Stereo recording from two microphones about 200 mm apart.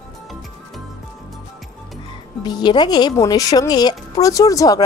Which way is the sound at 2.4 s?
20° left (ahead or behind).